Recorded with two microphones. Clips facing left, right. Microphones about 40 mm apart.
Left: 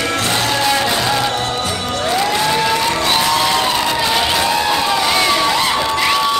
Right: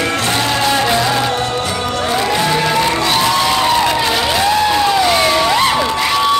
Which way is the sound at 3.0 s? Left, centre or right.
Centre.